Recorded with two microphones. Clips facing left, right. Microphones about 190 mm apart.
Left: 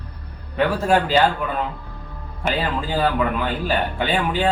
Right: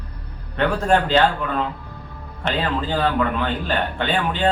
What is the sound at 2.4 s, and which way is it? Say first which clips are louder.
Speech: even; 10° left (ahead or behind).